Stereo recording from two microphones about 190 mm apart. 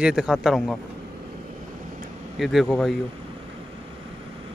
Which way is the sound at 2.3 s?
Centre (ahead or behind).